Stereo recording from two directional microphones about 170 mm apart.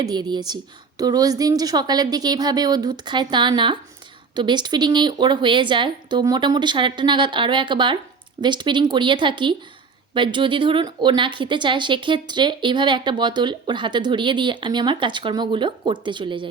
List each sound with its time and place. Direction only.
0.0 s a woman's voice: 25° right (ahead or behind)